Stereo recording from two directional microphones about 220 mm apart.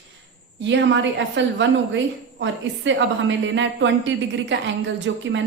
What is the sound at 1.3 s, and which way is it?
A woman's voice, 55° right (ahead or behind).